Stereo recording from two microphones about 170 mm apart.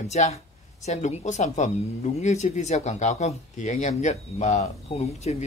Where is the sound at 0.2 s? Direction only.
45° left (ahead or behind).